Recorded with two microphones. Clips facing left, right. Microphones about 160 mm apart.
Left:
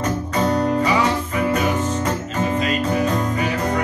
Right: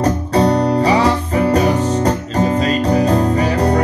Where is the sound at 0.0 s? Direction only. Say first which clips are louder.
Right 6 dB; 35° right (ahead or behind).